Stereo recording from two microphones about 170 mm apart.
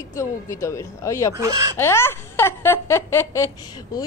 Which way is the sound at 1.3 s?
20° right (ahead or behind).